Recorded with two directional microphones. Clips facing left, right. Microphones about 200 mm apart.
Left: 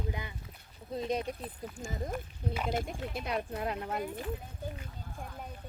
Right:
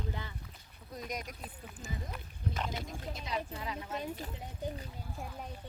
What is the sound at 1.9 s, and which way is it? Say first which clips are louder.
Speech: left 6 dB; 50° left (ahead or behind).